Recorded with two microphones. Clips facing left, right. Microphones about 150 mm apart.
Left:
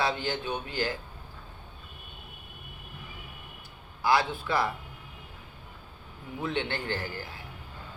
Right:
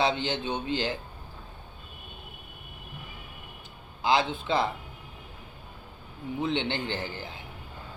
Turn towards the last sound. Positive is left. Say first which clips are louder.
# right 1 dB
turn(degrees=-20)  # may be behind; listen again after turning